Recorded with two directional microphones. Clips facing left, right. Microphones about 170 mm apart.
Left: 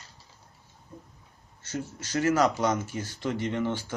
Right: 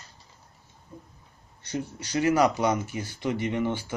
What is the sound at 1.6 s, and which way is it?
Speech, 15° right (ahead or behind).